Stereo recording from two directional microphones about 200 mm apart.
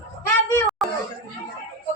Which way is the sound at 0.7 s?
Centre (ahead or behind).